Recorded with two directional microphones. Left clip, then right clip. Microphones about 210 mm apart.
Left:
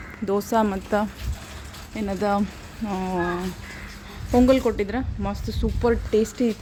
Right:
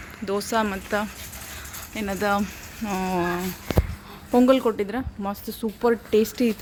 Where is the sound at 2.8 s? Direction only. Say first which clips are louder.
Right 1 dB; 5° right (ahead or behind).